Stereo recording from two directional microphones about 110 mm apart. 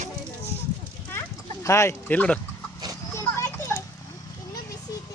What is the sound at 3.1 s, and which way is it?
Children playing, 25° left (ahead or behind).